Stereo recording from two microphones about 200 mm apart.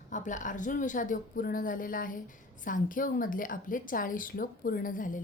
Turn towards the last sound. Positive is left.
turn(degrees=40)  # may be behind; listen again after turning